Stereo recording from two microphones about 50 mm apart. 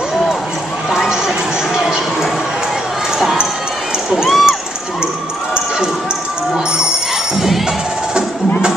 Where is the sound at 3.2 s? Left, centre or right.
Centre.